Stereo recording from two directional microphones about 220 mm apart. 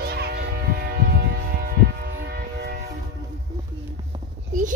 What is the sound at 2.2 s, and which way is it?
Train, 50° right (ahead or behind).